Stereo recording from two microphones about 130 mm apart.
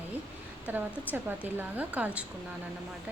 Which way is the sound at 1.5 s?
15° right (ahead or behind).